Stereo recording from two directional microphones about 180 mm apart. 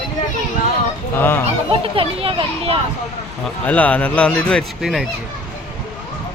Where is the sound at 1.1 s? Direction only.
10° left (ahead or behind).